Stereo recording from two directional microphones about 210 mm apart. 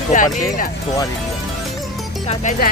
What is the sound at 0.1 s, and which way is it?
Speech, 40° left (ahead or behind).